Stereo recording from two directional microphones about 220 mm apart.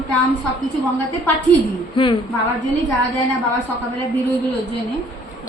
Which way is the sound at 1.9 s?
25° left (ahead or behind).